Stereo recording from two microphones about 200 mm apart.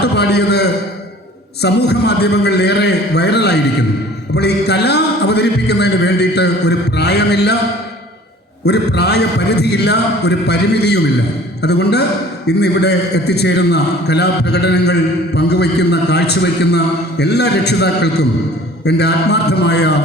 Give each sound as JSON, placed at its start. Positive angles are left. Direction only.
{"t": 0.0, "sound": "a man's voice", "side_deg": 55}
{"t": 8.6, "sound": "a man's voice", "side_deg": 55}